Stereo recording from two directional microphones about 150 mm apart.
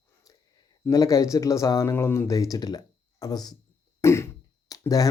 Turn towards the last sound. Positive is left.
turn(degrees=25)  # may be behind; listen again after turning